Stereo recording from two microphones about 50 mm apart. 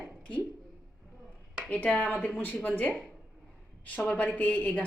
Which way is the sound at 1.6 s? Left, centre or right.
Left.